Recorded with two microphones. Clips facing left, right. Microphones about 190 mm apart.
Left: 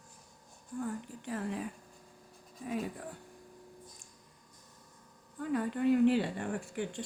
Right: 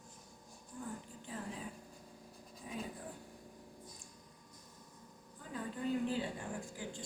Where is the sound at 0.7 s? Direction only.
70° left (ahead or behind).